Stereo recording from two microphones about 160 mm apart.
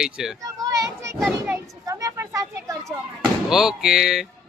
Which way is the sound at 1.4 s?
15° right (ahead or behind).